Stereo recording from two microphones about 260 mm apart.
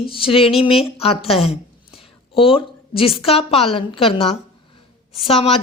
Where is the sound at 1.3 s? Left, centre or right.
Left.